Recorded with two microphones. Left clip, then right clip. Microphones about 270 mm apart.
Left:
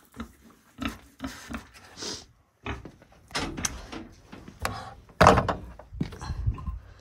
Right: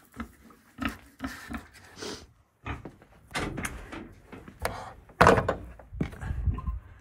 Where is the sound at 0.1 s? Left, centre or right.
Centre.